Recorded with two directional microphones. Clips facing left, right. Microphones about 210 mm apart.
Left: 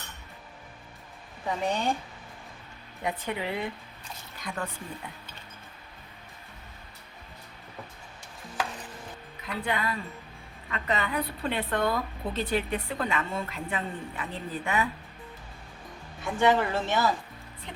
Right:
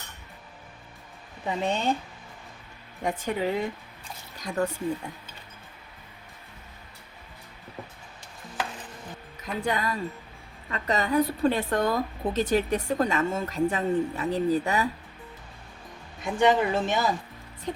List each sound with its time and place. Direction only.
1.5 s speech: 25° right (ahead or behind)
3.0 s a woman's voice: 45° right (ahead or behind)
9.4 s a woman's voice: 45° right (ahead or behind)
16.2 s speech: 15° right (ahead or behind)